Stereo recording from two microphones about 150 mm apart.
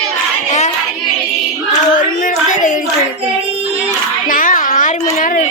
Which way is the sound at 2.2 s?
60° left (ahead or behind).